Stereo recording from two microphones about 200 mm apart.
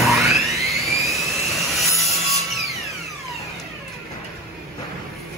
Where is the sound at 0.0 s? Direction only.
Centre (ahead or behind).